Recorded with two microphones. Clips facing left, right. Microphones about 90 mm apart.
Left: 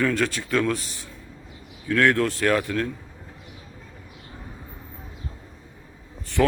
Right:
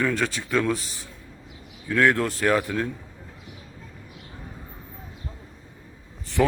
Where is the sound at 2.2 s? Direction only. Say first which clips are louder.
Left 3 dB; 35° right (ahead or behind).